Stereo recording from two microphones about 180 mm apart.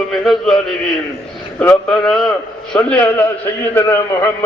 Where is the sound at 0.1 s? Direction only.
Centre (ahead or behind).